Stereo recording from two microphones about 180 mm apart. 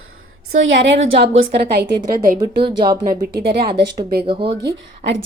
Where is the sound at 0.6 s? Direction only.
85° right.